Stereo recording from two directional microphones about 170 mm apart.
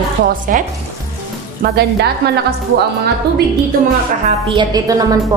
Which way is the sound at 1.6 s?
75° right (ahead or behind).